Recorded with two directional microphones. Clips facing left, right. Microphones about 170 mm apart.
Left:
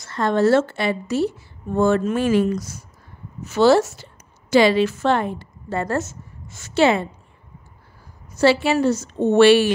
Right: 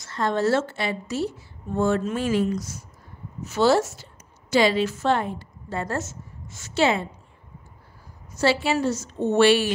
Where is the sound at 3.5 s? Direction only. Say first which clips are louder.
Left 5 dB; 80° left.